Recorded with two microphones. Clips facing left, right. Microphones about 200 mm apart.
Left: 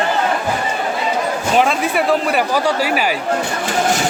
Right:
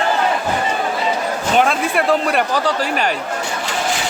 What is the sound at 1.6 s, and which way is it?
Speech, centre (ahead or behind).